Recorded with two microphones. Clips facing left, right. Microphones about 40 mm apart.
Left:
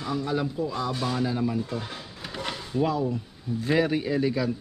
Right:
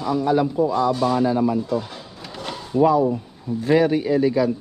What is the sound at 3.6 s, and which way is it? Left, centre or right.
Speech, centre.